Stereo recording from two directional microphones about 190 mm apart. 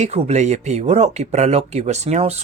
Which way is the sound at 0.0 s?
35° right (ahead or behind).